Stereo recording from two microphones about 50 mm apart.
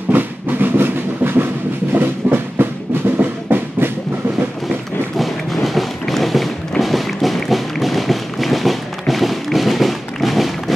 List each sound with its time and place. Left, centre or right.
0.1 s music: right
5.1 s a sound: centre
6.8 s music: centre